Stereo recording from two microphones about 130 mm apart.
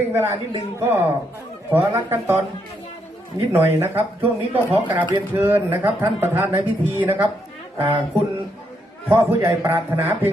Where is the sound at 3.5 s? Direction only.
20° right (ahead or behind).